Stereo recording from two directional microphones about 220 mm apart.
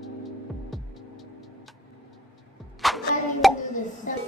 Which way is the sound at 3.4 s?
Centre (ahead or behind).